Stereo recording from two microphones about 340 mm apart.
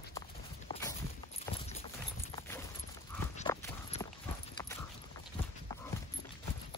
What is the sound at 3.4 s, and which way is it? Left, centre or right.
Clip-clop, centre.